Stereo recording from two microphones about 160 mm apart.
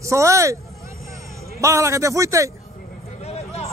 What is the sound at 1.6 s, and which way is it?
Speech, 20° right (ahead or behind).